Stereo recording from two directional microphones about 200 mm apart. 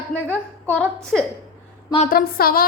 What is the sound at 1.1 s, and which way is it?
Speech, centre (ahead or behind).